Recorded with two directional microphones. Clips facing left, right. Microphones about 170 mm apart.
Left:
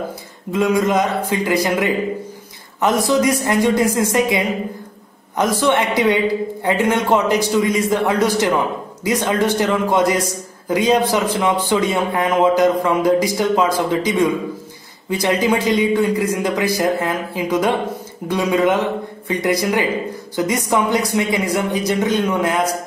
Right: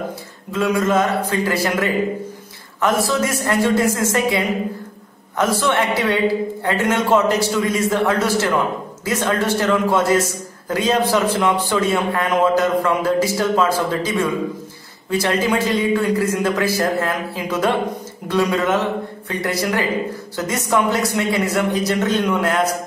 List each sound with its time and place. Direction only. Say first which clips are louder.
0.5 s speech: left 2 dB; 15° left (ahead or behind)